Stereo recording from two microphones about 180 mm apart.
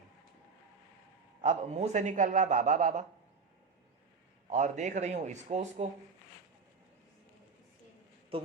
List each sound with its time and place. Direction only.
1.4 s a man's voice: 40° right (ahead or behind)
4.4 s a man's voice: 40° right (ahead or behind)
8.3 s a man's voice: 30° right (ahead or behind)